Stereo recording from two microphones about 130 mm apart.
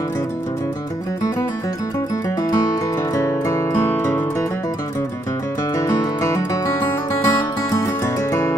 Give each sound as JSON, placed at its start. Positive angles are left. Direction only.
{"t": 2.4, "sound": "music", "side_deg": 25}
{"t": 5.8, "sound": "music", "side_deg": 25}